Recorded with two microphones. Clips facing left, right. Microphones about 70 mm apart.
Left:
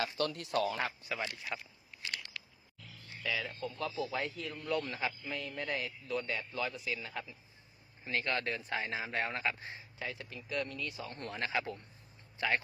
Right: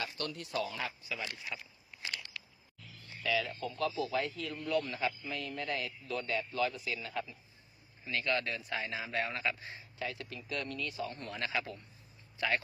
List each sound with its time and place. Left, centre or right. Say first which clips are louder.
0.0 s speech: left 5 dB; left
0.8 s a man's voice: left 3 dB; left
2.0 s a sound: even; right
3.2 s a man's voice: right 3 dB; centre
8.0 s a man's voice: right 1 dB; left
10.0 s a man's voice: right 2 dB; centre
11.1 s speech: left 1 dB; left